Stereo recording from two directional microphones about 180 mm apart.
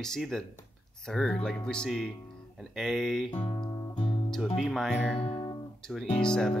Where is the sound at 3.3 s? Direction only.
30° left (ahead or behind).